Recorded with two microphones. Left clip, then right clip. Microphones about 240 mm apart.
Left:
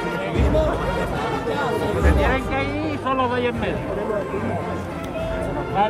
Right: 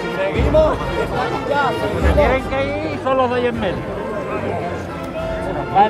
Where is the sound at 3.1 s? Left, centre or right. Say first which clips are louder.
Right 5 dB; right.